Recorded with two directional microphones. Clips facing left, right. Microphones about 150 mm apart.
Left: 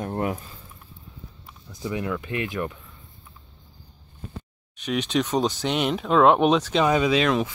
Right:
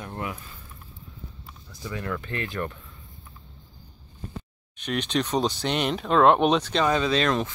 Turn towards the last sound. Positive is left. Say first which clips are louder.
# left 2 dB
turn(degrees=5)  # may be behind; listen again after turning